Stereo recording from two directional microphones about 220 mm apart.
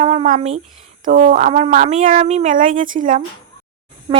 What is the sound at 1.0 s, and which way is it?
Speech, 35° right (ahead or behind).